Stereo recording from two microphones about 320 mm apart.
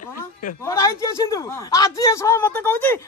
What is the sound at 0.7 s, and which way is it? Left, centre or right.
Speech, centre.